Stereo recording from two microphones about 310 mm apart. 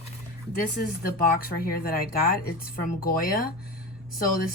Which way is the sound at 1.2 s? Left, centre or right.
Left.